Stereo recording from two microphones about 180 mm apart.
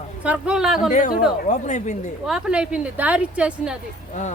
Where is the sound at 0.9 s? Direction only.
40° left (ahead or behind).